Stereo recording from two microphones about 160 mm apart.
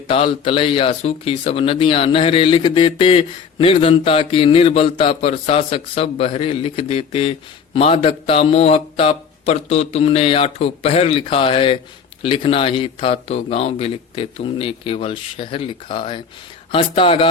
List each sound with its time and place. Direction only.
0.1 s speech: 35° left (ahead or behind)